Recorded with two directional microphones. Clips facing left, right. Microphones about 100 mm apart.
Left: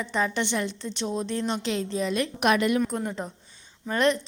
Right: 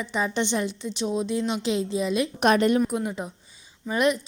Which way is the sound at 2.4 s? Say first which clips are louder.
Right 3 dB; 35° right (ahead or behind).